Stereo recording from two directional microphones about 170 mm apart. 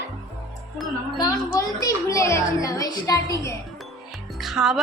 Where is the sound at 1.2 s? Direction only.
20° left (ahead or behind).